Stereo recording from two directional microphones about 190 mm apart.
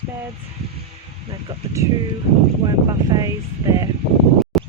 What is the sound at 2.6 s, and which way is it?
Speech, 20° right (ahead or behind).